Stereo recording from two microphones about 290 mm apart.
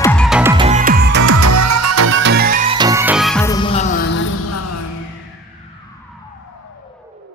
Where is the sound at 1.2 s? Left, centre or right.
Right.